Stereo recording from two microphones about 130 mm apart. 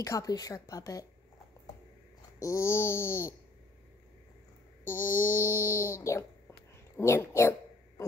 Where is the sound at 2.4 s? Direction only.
25° left (ahead or behind).